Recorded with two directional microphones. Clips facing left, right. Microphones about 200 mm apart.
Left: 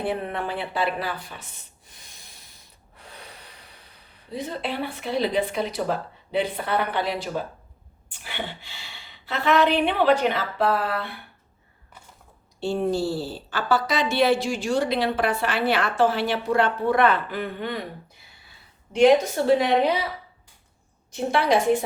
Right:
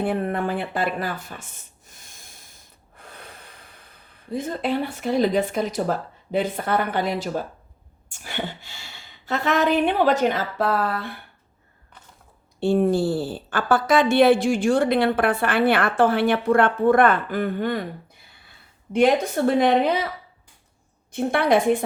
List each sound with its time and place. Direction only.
0.0 s a woman's voice: 45° right (ahead or behind)
1.9 s snort: 50° right (ahead or behind)
3.0 s speech: 50° right (ahead or behind)
12.5 s a woman's voice: 55° right (ahead or behind)
18.9 s a woman's voice: 55° right (ahead or behind)
21.1 s a woman's voice: 55° right (ahead or behind)